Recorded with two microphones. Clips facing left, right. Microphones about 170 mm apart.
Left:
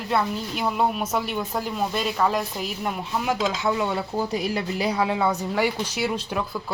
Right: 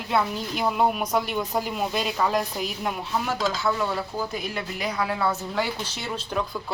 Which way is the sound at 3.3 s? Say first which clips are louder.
Left 3 dB; 15° left (ahead or behind).